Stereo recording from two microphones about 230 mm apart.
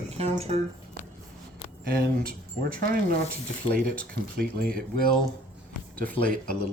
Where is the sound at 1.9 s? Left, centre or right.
Right.